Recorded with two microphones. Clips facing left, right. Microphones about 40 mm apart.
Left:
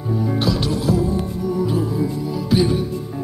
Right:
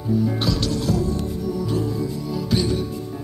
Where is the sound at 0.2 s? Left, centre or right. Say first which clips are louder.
Left 2 dB; centre.